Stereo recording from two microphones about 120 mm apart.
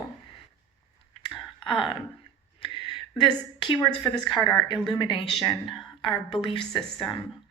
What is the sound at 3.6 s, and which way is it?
A woman's voice, 40° left (ahead or behind).